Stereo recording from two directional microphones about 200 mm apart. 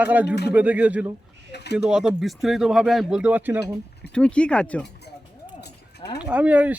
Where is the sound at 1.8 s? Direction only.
5° right (ahead or behind).